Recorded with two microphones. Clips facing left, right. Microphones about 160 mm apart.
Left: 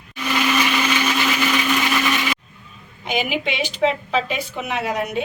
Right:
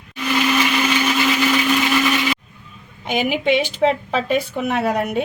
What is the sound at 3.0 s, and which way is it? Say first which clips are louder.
A woman's voice: right 3 dB; 50° right (ahead or behind).